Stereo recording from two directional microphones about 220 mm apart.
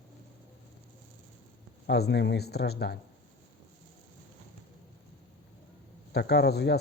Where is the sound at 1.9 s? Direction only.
50° left (ahead or behind).